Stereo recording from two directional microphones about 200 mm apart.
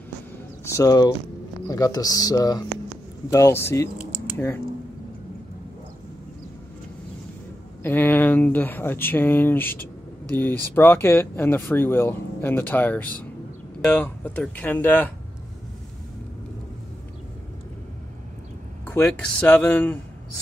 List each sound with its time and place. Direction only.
0.7 s speech: 15° left (ahead or behind)
7.8 s speech: 10° left (ahead or behind)
18.9 s speech: 5° left (ahead or behind)